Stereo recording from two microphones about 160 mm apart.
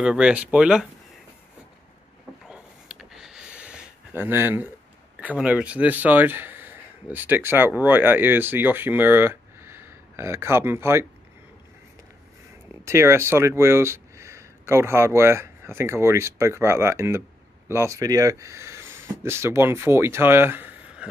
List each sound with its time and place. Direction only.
0.0 s speech: 5° right (ahead or behind)
2.5 s a sound: 5° right (ahead or behind)
5.2 s speech: 10° right (ahead or behind)
12.8 s speech: 15° right (ahead or behind)